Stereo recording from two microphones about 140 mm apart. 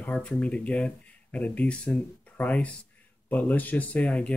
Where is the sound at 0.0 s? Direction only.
10° left (ahead or behind).